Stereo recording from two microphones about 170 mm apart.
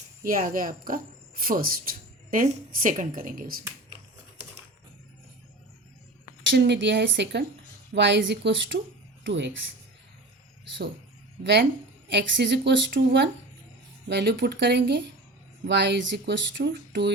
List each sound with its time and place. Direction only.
0.3 s a woman's voice: 55° right (ahead or behind)
6.5 s speech: 90° right
12.0 s speech: 90° right